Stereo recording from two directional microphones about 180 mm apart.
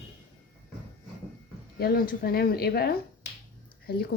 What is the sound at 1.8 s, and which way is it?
A woman's voice, 55° left (ahead or behind).